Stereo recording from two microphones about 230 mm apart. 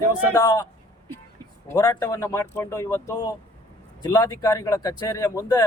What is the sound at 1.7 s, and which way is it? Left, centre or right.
Speech, centre.